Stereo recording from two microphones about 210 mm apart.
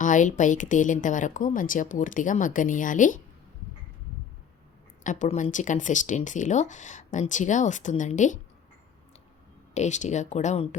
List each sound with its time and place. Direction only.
0.0 s speech: 35° left (ahead or behind)
5.0 s speech: 35° left (ahead or behind)
9.7 s speech: 35° left (ahead or behind)